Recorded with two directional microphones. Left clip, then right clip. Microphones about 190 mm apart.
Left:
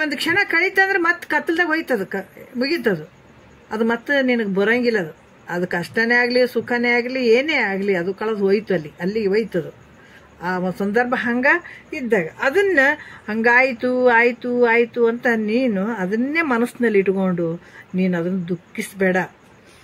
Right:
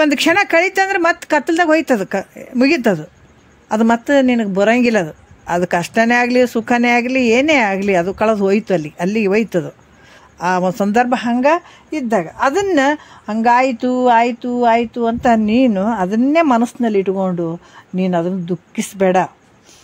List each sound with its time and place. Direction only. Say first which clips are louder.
0.0 s a woman's voice: right 6 dB; 60° right (ahead or behind)